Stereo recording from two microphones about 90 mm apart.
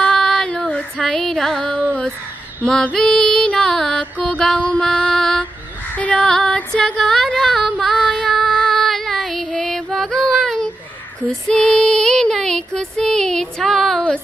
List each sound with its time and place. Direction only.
0.0 s female singing: 5° left (ahead or behind)
2.6 s music: 10° left (ahead or behind)
5.9 s female singing: 15° left (ahead or behind)